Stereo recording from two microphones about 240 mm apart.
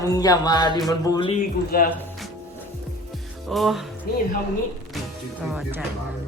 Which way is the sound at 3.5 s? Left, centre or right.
Centre.